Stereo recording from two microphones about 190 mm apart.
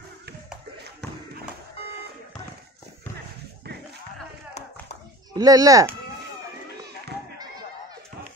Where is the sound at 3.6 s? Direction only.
60° right (ahead or behind).